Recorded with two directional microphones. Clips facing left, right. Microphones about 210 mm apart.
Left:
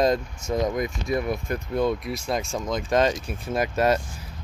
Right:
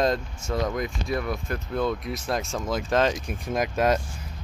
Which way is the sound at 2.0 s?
Centre (ahead or behind).